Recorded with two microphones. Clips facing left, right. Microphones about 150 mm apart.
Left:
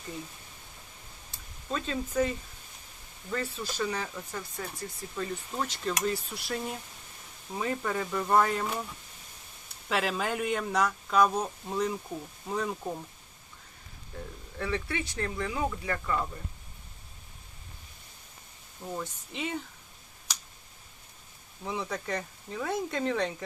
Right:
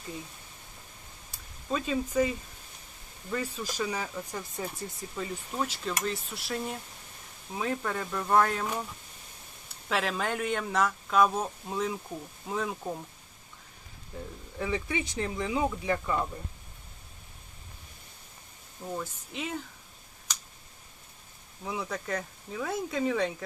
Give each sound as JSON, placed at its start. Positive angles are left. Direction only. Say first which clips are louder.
{"t": 1.7, "sound": "speech", "louder": "right 2 dB", "side_deg": -10}
{"t": 3.3, "sound": "speech", "louder": "even", "side_deg": -10}
{"t": 5.1, "sound": "speech", "louder": "even", "side_deg": -10}
{"t": 9.9, "sound": "speech", "louder": "even", "side_deg": 0}
{"t": 14.6, "sound": "speech", "louder": "right 1 dB", "side_deg": -15}
{"t": 18.9, "sound": "speech", "louder": "right 1 dB", "side_deg": 0}
{"t": 21.6, "sound": "speech", "louder": "even", "side_deg": 0}